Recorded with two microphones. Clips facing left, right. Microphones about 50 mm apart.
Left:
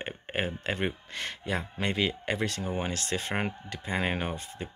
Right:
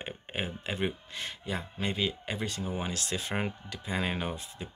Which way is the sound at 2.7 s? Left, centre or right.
Left.